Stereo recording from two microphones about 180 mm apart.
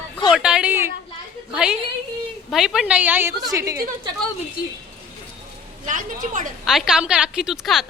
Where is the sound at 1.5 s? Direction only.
5° right (ahead or behind).